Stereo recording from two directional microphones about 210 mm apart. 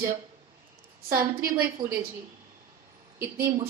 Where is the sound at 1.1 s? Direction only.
45° right (ahead or behind).